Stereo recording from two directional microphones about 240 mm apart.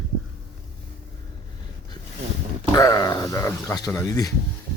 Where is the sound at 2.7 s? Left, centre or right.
Centre.